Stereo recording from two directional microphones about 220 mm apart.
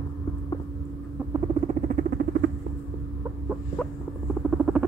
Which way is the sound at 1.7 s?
35° right (ahead or behind).